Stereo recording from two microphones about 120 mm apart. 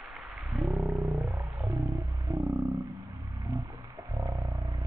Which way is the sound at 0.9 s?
35° right (ahead or behind).